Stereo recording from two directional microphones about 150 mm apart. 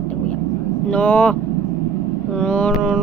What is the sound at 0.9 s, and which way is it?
Speech, 10° left (ahead or behind).